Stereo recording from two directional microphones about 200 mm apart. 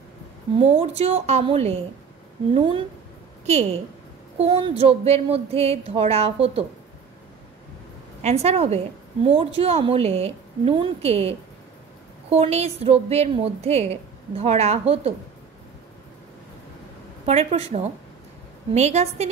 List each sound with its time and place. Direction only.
0.7 s a woman's voice: 30° right (ahead or behind)
8.2 s a woman's voice: 30° right (ahead or behind)
17.3 s a woman's voice: 30° right (ahead or behind)
18.7 s a woman's voice: 35° right (ahead or behind)